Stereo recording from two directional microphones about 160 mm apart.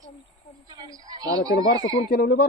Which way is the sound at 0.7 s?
25° right (ahead or behind).